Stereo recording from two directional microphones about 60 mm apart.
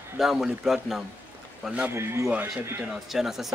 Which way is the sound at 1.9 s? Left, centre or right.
Right.